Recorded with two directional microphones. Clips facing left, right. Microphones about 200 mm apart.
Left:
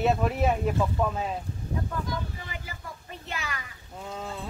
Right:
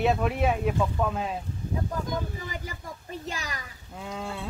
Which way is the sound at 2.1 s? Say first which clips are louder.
Right 3 dB; 40° right (ahead or behind).